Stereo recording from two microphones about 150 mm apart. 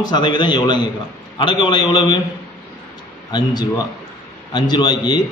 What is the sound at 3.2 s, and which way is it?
A man's voice, 25° left (ahead or behind).